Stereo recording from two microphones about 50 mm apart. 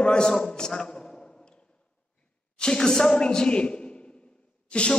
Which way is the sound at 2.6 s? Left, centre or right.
Centre.